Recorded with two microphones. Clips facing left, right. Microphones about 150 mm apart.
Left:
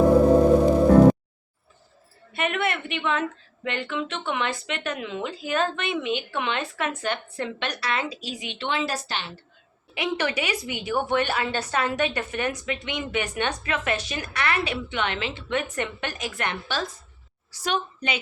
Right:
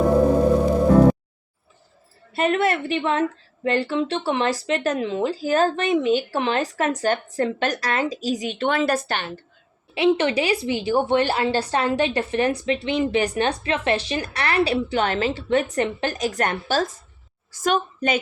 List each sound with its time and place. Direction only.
2.3 s a woman's voice: 35° right (ahead or behind); by 9.4 s 50° right (ahead or behind)
9.9 s a woman's voice: 25° right (ahead or behind); by 18.2 s 45° right (ahead or behind)